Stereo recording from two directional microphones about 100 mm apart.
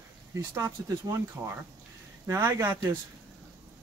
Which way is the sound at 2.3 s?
30° right (ahead or behind).